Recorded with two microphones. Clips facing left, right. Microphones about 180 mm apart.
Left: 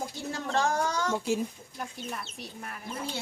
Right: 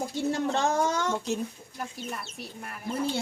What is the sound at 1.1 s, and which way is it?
Speech, 10° left (ahead or behind).